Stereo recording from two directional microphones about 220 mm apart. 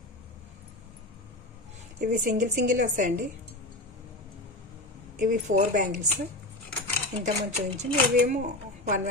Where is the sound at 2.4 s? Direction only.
35° right (ahead or behind).